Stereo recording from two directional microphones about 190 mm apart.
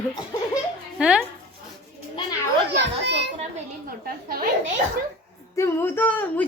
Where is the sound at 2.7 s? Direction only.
65° right (ahead or behind).